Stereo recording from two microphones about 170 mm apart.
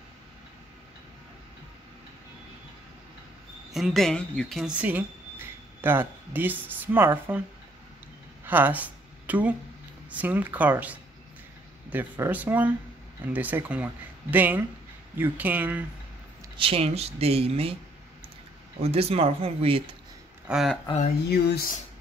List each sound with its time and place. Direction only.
3.7 s speech: centre (ahead or behind)
8.5 s speech: 10° right (ahead or behind)
16.5 s speech: 35° right (ahead or behind)
18.8 s speech: 35° right (ahead or behind)
20.4 s speech: 5° right (ahead or behind)
21.3 s speech: 70° left (ahead or behind)